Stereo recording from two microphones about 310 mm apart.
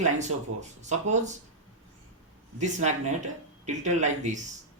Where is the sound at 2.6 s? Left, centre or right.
Right.